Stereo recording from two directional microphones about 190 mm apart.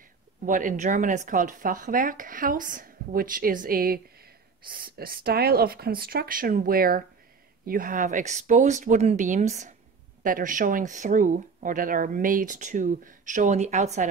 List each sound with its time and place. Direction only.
0.5 s speech: 45° right (ahead or behind)